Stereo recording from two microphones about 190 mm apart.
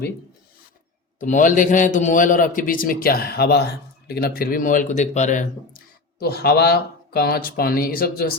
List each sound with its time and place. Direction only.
1.2 s a man's voice: 40° left (ahead or behind)